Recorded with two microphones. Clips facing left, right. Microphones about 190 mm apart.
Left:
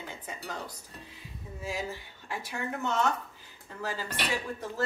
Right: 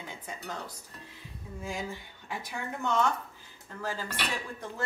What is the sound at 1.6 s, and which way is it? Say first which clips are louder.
Speech: left 1 dB; 5° left (ahead or behind).